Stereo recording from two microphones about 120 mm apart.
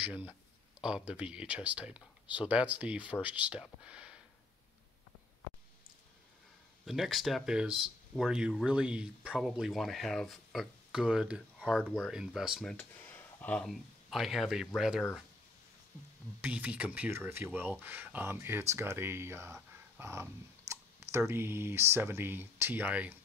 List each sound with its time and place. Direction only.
0.0 s speech: 10° right (ahead or behind)
6.9 s speech: centre (ahead or behind)
12.6 s a sound: 15° left (ahead or behind)
13.7 s speech: centre (ahead or behind)
16.3 s speech: 15° right (ahead or behind)